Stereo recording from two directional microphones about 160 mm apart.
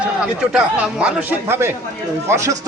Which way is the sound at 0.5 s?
5° right (ahead or behind).